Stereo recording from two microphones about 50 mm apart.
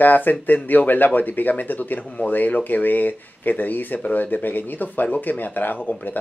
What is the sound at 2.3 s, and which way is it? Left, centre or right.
Speech, left.